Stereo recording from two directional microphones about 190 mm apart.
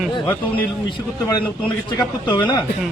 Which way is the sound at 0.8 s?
25° left (ahead or behind).